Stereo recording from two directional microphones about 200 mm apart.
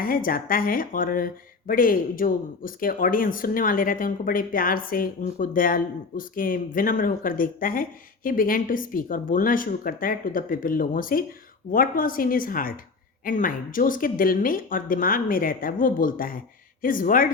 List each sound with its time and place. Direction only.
0.0 s speech: 45° left (ahead or behind)